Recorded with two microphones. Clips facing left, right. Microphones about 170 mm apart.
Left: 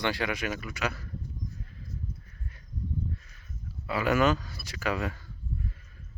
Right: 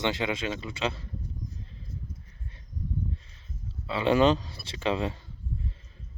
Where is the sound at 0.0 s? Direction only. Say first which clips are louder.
Right 1 dB; 20° right (ahead or behind).